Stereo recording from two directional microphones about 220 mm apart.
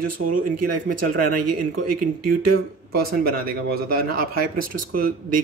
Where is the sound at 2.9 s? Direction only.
45° right (ahead or behind).